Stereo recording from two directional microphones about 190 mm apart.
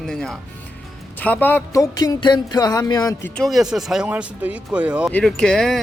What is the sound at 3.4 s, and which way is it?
Speech, centre (ahead or behind).